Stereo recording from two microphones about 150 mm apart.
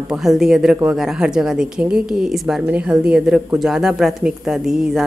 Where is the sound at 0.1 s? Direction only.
5° right (ahead or behind).